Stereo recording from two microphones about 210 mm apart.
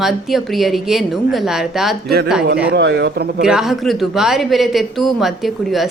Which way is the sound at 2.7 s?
55° right (ahead or behind).